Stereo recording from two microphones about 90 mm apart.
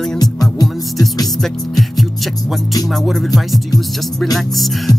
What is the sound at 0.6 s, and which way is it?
Music, 45° left (ahead or behind).